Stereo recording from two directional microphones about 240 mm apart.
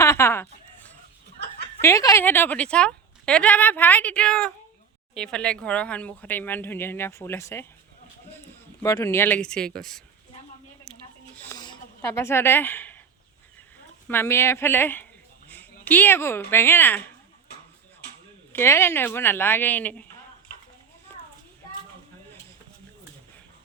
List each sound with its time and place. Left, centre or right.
0.0 s a sound: centre
1.8 s speech: centre
8.8 s speech: centre
11.4 s a sound: centre
14.1 s speech: centre
18.5 s speech: centre
21.1 s children playing: centre